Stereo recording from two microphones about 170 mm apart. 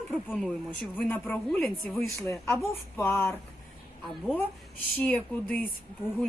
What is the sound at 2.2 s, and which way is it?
A woman's voice, 15° left (ahead or behind).